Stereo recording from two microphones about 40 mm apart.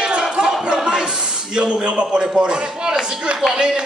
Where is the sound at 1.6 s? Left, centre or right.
Right.